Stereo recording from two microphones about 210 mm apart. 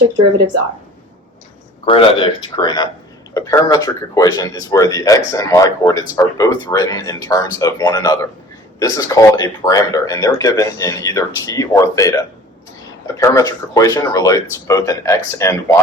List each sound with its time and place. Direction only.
1.8 s speech: 25° left (ahead or behind)